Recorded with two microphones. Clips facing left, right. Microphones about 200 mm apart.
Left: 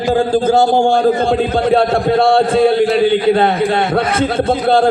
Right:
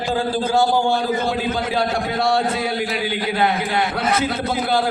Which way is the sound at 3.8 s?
60° left (ahead or behind).